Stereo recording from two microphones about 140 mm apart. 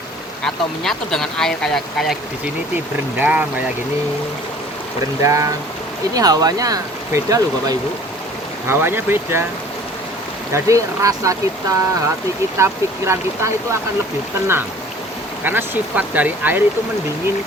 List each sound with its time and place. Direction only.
0.4 s speech: 5° left (ahead or behind)
3.2 s speech: 10° right (ahead or behind)
5.2 s speech: 20° right (ahead or behind)
10.5 s speech: 20° right (ahead or behind)
15.4 s speech: 15° right (ahead or behind)